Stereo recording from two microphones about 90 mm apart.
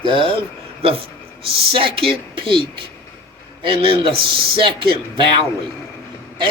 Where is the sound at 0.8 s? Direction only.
90° right.